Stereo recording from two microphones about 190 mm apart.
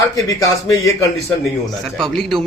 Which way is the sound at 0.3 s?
20° left (ahead or behind).